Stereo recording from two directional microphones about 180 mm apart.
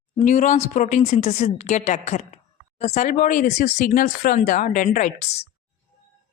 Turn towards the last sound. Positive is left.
turn(degrees=35)  # may be behind; listen again after turning